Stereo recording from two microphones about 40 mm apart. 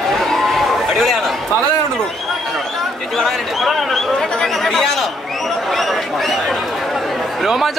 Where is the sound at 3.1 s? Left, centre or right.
Centre.